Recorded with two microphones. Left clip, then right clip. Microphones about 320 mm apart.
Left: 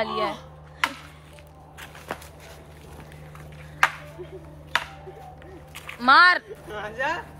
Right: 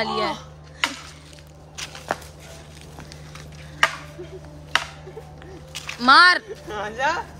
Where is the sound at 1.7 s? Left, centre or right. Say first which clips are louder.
Right 7 dB; centre.